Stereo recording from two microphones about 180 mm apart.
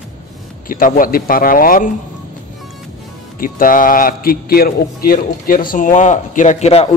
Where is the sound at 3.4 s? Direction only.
50° left (ahead or behind).